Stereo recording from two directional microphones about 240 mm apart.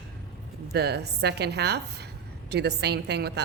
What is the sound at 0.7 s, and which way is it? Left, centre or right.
Speech, right.